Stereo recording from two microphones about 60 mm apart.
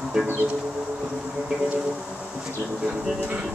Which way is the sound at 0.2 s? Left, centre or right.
Centre.